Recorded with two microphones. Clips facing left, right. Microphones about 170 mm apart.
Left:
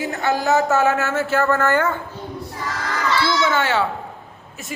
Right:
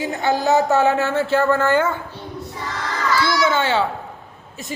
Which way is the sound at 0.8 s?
30° right (ahead or behind).